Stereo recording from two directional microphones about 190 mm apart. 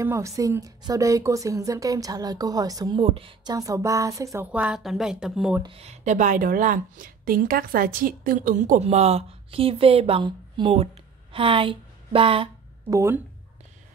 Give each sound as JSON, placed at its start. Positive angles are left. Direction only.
{"t": 0.0, "sound": "a woman's voice", "side_deg": -15}
{"t": 4.5, "sound": "speech", "side_deg": -5}
{"t": 5.6, "sound": "speech", "side_deg": -30}
{"t": 12.9, "sound": "a woman's voice", "side_deg": -15}